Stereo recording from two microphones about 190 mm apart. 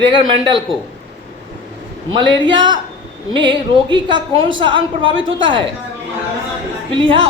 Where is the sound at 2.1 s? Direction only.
25° right (ahead or behind).